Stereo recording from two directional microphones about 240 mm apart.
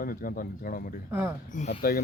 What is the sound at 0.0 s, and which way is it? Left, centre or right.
Speech, left.